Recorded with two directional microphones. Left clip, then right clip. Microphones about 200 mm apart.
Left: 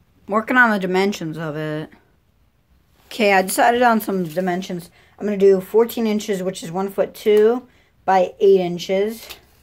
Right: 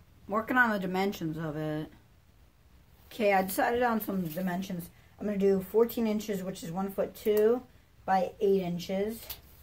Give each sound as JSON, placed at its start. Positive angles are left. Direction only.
{"t": 0.3, "sound": "speech", "side_deg": 35}
{"t": 3.1, "sound": "speech", "side_deg": 40}